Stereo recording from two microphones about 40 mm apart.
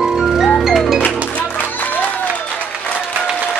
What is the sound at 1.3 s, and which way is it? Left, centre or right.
Music, left.